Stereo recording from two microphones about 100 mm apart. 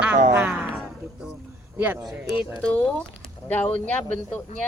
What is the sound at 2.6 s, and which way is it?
Speech, 10° left (ahead or behind).